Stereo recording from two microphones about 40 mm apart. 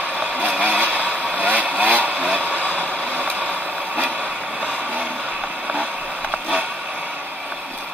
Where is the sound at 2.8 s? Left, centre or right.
Right.